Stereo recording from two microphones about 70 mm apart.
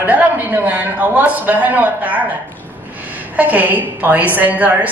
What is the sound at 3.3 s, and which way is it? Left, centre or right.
A woman's voice, right.